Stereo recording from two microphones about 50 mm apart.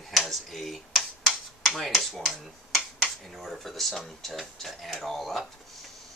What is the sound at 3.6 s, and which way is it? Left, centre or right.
Speech, centre.